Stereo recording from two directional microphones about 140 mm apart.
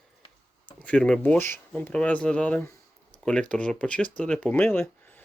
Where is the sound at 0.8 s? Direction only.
10° left (ahead or behind).